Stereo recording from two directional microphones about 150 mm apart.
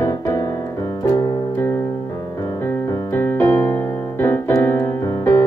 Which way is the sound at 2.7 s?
15° left (ahead or behind).